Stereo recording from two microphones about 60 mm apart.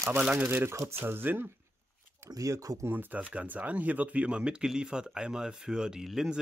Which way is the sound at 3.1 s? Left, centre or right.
Right.